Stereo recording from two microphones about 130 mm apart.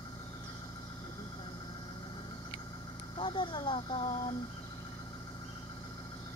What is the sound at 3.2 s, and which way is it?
Speech, 40° left (ahead or behind).